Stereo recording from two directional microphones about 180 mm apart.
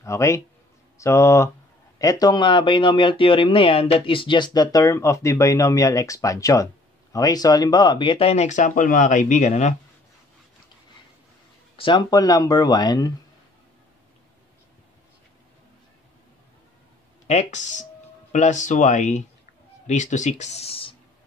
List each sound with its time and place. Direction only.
0.0 s speech: 15° left (ahead or behind); by 9.8 s 40° left (ahead or behind)
11.7 s speech: 25° left (ahead or behind)
17.3 s speech: 40° left (ahead or behind)